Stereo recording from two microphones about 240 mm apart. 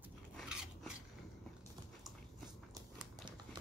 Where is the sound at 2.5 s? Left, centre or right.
Centre.